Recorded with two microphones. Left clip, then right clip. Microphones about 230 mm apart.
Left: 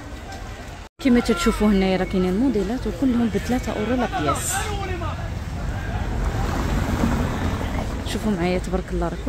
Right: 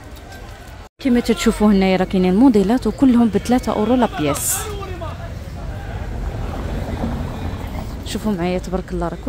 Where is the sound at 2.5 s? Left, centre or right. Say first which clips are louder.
Right 7 dB; right.